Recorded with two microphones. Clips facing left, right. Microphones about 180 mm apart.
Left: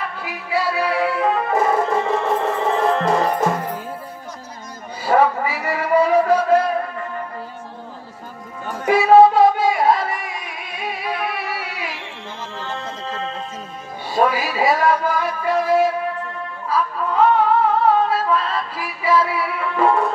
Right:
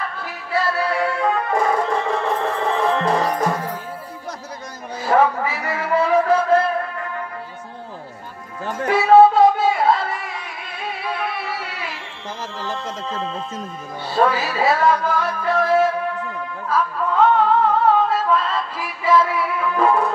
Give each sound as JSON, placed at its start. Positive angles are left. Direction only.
{"t": 0.2, "sound": "music", "side_deg": 10}
{"t": 5.0, "sound": "a sound", "side_deg": 10}
{"t": 8.8, "sound": "music", "side_deg": 15}
{"t": 12.3, "sound": "music", "side_deg": -90}
{"t": 14.0, "sound": "music", "side_deg": 15}